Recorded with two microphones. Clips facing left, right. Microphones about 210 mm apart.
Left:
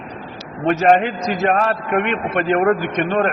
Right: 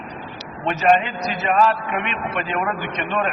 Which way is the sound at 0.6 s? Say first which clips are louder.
Left 4 dB; 50° left (ahead or behind).